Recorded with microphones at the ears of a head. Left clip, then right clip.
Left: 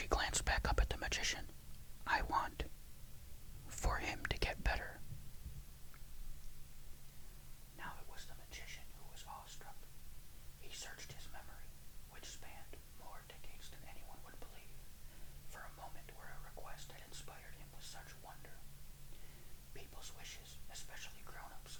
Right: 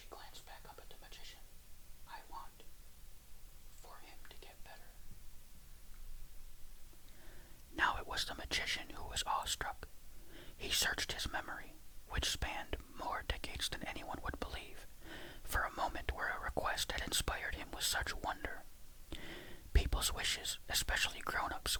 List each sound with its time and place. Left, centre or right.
0.0 s whispering: left
3.7 s whispering: left
7.7 s whispering: right